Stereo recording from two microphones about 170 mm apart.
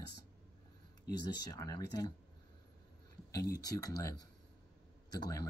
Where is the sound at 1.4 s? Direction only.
25° left (ahead or behind).